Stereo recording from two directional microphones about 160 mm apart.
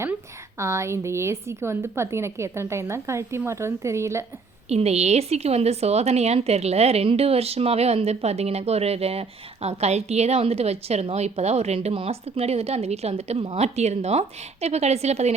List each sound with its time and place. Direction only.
0.6 s a woman's voice: 15° right (ahead or behind)
4.7 s a woman's voice: 40° right (ahead or behind)